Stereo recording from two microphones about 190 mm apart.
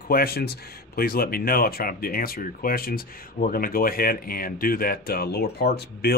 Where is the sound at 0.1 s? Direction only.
55° left (ahead or behind).